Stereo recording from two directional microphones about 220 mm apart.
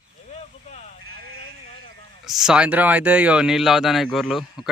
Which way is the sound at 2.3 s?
Centre (ahead or behind).